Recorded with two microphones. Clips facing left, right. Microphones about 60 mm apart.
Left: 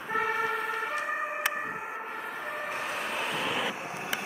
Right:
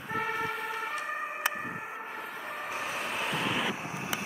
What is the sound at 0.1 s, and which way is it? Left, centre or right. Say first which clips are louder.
Emergency vehicle: left 3 dB; centre.